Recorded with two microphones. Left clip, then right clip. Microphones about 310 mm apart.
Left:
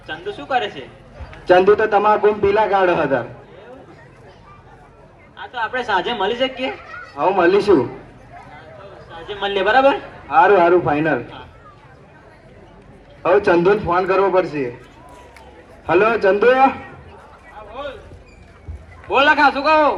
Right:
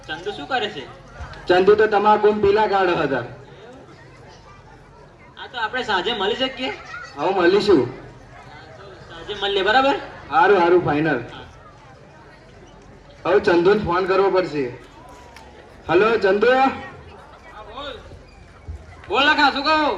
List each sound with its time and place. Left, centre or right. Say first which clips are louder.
0.1 s a man's voice: left 3 dB; left
5.4 s a man's voice: left 2 dB; left
9.0 s a man's voice: left 1 dB; left
13.2 s a man's voice: left 2 dB; left
15.9 s a man's voice: left 2 dB; left
19.0 s a man's voice: left 3 dB; left